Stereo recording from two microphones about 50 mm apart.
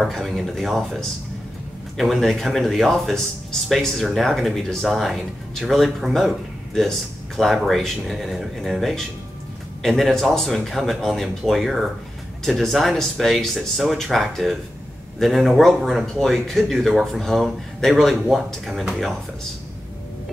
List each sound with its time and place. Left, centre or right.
0.0 s speech: centre